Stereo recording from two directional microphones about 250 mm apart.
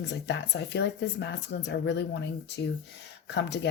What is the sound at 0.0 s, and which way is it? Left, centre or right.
Speech, left.